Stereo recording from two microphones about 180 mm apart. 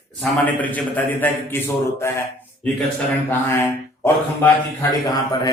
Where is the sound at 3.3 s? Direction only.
15° left (ahead or behind).